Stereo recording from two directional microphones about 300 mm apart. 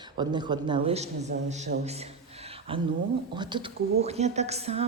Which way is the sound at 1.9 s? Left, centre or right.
Right.